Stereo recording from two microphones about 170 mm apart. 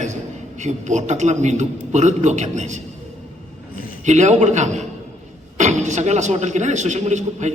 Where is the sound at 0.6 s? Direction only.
45° right (ahead or behind).